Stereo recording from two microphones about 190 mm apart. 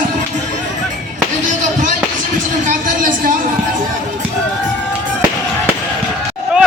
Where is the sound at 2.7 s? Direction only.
45° right (ahead or behind).